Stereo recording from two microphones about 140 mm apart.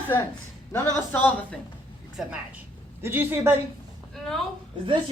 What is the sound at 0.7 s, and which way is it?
Speech, 15° left (ahead or behind).